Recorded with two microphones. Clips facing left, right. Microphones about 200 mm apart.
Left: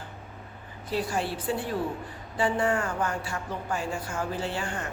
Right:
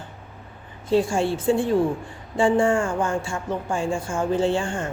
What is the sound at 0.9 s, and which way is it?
Speech, 25° right (ahead or behind).